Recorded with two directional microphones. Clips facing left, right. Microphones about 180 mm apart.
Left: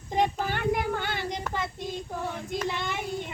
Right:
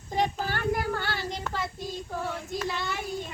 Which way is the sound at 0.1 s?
20° left (ahead or behind).